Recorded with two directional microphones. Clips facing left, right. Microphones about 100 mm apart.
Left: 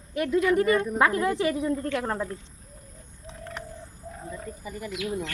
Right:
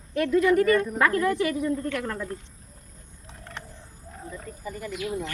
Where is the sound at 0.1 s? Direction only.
20° left (ahead or behind).